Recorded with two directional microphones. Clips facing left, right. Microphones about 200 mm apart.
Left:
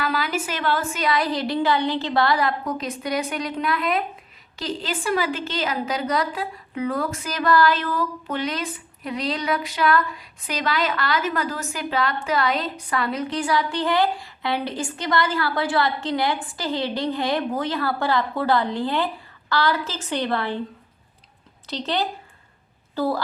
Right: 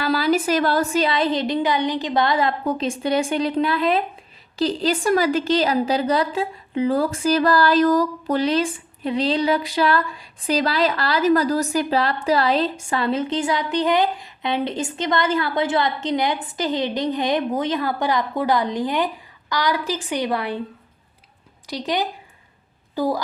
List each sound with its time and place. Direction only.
0.0 s a woman's voice: 35° right (ahead or behind); by 20.6 s 10° right (ahead or behind)
21.7 s a woman's voice: 15° right (ahead or behind)